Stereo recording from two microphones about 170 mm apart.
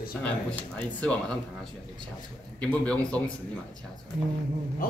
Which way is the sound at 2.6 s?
5° left (ahead or behind).